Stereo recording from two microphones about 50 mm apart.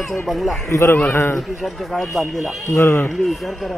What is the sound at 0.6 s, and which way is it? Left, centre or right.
Speech, left.